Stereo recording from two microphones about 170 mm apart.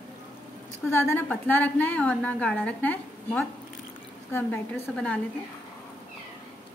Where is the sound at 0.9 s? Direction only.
15° left (ahead or behind).